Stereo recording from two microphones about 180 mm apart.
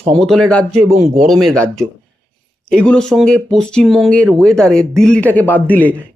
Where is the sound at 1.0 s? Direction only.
40° right (ahead or behind).